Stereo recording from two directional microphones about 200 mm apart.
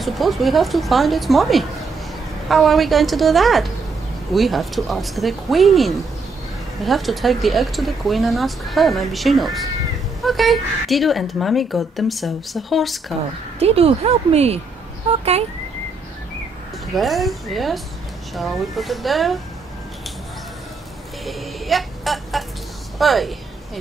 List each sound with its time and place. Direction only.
0.0 s speech: centre (ahead or behind)
13.6 s speech: 30° right (ahead or behind)
16.9 s speech: centre (ahead or behind)
21.3 s a sound: centre (ahead or behind)
22.9 s speech: centre (ahead or behind)